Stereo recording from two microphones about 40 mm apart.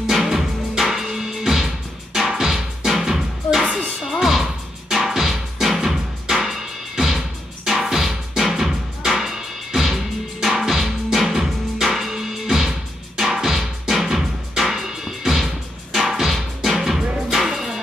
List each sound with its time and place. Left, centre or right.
0.1 s music: centre
4.1 s music: centre